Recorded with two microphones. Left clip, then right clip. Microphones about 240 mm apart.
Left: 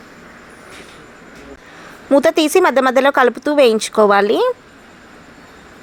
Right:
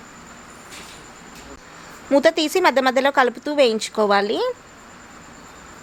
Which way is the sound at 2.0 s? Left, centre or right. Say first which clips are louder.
Left 4 dB; centre.